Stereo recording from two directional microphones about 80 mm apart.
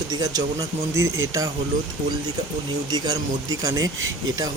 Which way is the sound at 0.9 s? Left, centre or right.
Right.